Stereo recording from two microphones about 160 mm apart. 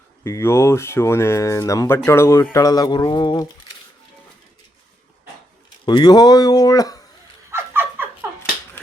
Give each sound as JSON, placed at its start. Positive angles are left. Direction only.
{"t": 0.3, "sound": "speech", "side_deg": 15}
{"t": 5.8, "sound": "speech", "side_deg": 30}
{"t": 7.5, "sound": "a sound", "side_deg": -15}